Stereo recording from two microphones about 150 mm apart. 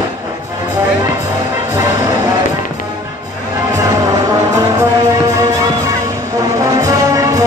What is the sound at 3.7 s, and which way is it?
Music, 25° right (ahead or behind).